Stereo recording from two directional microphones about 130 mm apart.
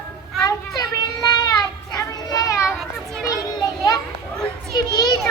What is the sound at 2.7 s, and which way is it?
Children playing, centre (ahead or behind).